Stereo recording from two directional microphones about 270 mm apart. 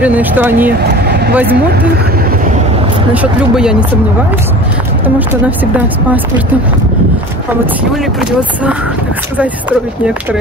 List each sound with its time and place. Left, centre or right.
0.0 s speech: centre
1.0 s vehicle: right
1.3 s speech: centre
3.1 s speech: centre
5.0 s speech: centre
7.9 s speech: centre